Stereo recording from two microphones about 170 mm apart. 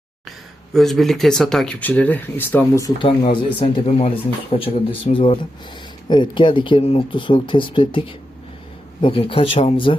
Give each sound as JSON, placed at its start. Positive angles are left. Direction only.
{"t": 0.3, "sound": "speech", "side_deg": 0}
{"t": 2.8, "sound": "speech", "side_deg": 30}